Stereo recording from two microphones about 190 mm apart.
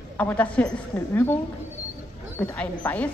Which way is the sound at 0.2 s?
10° left (ahead or behind).